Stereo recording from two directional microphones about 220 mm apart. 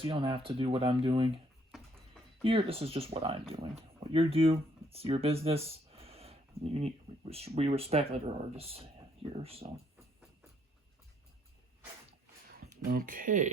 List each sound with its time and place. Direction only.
0.0 s speech: 25° right (ahead or behind)
2.4 s speech: 25° right (ahead or behind)
12.8 s speech: 40° right (ahead or behind)